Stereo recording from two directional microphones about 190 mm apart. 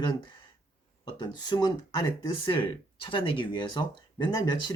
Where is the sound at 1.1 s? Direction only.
25° left (ahead or behind).